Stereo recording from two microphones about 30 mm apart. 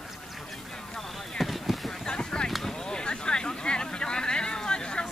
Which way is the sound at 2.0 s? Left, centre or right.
Left.